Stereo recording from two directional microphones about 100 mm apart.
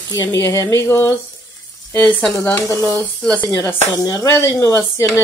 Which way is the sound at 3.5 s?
35° left (ahead or behind).